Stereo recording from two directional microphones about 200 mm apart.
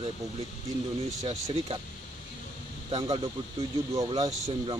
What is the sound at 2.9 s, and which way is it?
Speech, 25° right (ahead or behind).